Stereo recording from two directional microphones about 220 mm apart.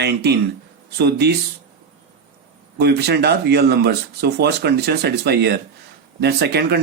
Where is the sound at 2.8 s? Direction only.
45° right (ahead or behind).